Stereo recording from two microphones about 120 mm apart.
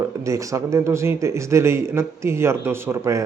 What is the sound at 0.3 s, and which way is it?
Speech, 25° right (ahead or behind).